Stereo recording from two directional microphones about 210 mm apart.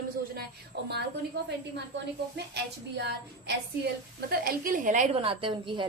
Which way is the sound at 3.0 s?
55° right (ahead or behind).